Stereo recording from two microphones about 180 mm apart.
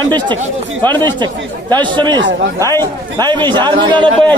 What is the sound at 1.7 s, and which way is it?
Speech, 25° right (ahead or behind).